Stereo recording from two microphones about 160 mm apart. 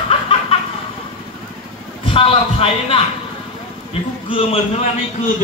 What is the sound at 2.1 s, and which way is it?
Speech, 35° left (ahead or behind).